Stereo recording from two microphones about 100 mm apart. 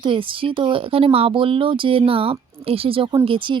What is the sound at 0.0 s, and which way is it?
Speech, 60° right (ahead or behind).